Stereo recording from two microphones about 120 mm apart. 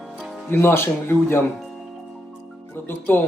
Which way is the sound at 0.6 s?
20° left (ahead or behind).